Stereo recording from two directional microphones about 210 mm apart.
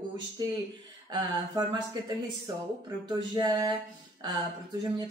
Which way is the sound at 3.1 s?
20° right (ahead or behind).